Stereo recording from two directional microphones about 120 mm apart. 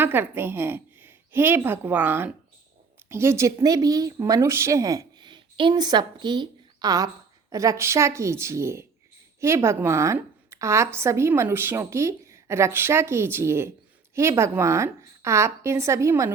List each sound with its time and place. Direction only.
0.0 s a woman's voice: 15° right (ahead or behind)